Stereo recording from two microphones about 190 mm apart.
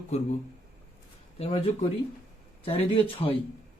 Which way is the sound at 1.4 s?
35° left (ahead or behind).